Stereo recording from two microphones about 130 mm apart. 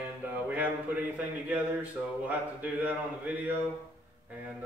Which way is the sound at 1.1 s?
15° right (ahead or behind).